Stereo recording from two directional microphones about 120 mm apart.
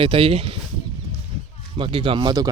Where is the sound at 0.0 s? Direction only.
50° right (ahead or behind).